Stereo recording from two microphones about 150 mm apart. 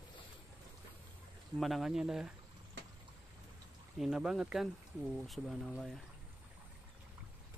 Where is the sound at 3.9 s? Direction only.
5° right (ahead or behind).